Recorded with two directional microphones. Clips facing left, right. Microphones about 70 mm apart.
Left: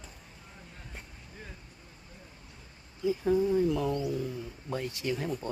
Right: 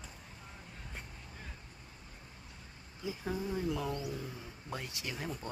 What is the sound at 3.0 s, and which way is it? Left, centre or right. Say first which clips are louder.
Speech: left 11 dB; centre.